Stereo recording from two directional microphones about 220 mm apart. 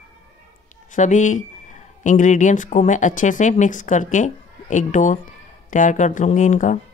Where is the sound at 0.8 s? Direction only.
35° left (ahead or behind).